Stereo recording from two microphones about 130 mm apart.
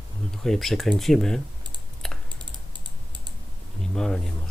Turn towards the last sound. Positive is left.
turn(degrees=5)  # may be behind; listen again after turning